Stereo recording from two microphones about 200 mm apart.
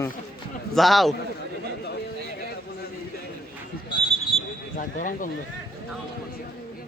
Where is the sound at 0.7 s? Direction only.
Centre (ahead or behind).